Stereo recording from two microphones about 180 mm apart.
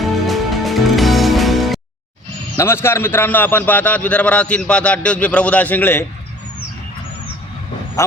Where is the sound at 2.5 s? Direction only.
15° left (ahead or behind).